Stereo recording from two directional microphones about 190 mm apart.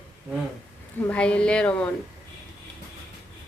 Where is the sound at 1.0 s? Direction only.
5° left (ahead or behind).